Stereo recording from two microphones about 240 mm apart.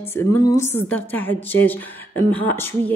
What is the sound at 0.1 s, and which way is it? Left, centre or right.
Speech, centre.